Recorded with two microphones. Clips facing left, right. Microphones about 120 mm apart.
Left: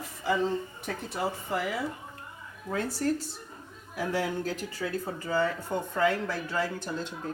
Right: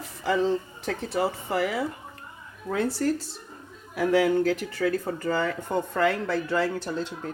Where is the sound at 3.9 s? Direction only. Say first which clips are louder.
Right 9 dB; 70° right (ahead or behind).